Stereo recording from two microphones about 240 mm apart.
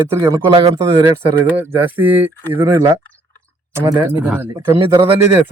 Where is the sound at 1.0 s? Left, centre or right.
Centre.